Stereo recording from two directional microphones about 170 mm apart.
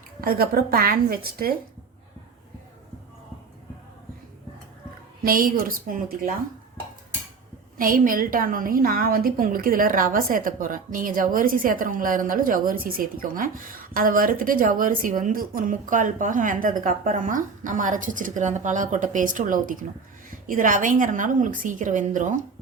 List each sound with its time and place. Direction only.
0.2 s a woman's voice: 60° right (ahead or behind)
5.2 s a woman's voice: 55° right (ahead or behind)
7.8 s a woman's voice: 55° right (ahead or behind)